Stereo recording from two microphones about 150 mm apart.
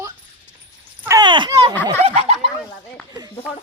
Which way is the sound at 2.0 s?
45° right (ahead or behind).